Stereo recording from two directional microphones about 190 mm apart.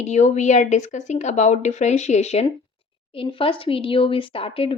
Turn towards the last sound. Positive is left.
turn(degrees=30)  # may be behind; listen again after turning